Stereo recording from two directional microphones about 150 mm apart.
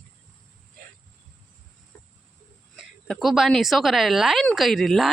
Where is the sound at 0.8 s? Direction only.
75° right (ahead or behind).